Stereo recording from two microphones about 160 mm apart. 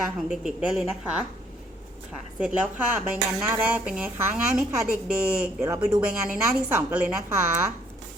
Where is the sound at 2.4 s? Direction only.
5° right (ahead or behind).